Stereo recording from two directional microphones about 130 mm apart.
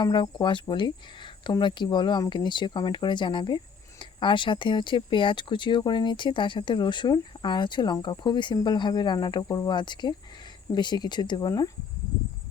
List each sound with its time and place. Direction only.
0.0 s speech: 35° left (ahead or behind)